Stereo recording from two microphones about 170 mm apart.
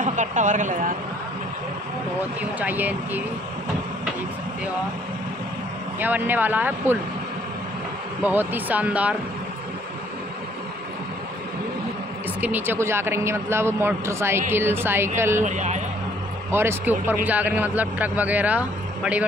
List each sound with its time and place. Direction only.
0.0 s speech: 45° right (ahead or behind)
2.6 s a man's voice: 10° right (ahead or behind)
5.9 s a man's voice: 10° right (ahead or behind)
8.2 s a man's voice: 10° right (ahead or behind)
12.4 s a man's voice: 10° right (ahead or behind)
15.4 s speech: 45° right (ahead or behind)
16.4 s a man's voice: 15° right (ahead or behind)